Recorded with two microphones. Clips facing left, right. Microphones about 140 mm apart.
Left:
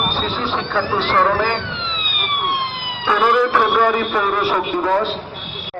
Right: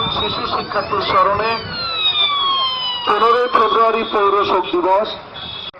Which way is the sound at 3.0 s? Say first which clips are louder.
Right 1 dB; 20° right (ahead or behind).